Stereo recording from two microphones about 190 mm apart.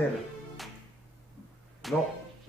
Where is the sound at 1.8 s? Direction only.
Centre (ahead or behind).